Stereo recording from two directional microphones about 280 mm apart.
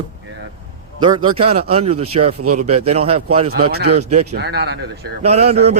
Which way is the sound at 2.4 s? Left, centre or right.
Right.